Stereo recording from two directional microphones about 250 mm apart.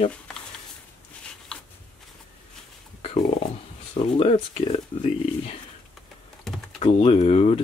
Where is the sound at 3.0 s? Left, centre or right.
Left.